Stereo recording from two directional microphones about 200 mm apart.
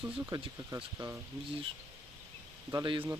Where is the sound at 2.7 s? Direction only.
25° right (ahead or behind).